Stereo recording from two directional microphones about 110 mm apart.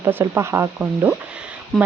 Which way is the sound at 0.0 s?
20° right (ahead or behind).